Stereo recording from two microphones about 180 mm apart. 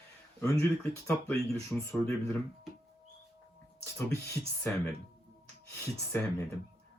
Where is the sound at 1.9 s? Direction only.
15° left (ahead or behind).